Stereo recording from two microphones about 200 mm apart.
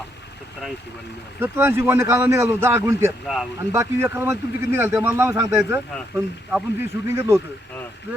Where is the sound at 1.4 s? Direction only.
10° right (ahead or behind).